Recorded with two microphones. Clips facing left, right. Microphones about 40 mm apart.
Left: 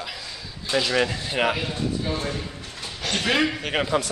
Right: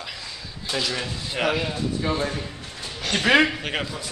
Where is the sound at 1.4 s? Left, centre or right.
Centre.